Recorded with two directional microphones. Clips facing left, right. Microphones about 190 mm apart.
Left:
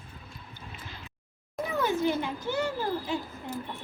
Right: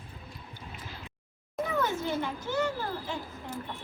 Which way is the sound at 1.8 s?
10° left (ahead or behind).